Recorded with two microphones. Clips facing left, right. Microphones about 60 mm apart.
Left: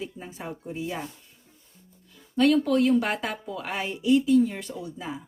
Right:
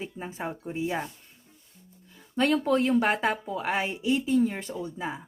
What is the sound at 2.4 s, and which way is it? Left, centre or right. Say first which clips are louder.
Speech: left 3 dB; right.